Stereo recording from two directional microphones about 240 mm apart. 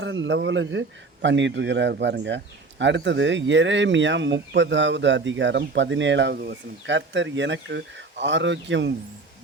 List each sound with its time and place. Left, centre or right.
0.0 s a man's voice: right